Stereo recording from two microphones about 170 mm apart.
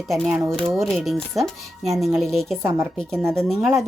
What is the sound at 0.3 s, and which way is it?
Speech, 15° right (ahead or behind).